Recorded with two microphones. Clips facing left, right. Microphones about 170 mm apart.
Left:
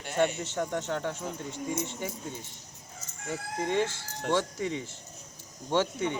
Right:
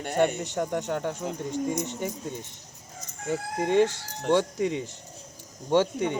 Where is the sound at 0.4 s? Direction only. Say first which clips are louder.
Right 3 dB; 15° right (ahead or behind).